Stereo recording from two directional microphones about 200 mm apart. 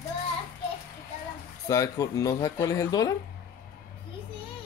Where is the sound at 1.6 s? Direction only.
15° left (ahead or behind).